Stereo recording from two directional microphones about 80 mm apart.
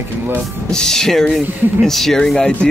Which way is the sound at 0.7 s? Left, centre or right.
Centre.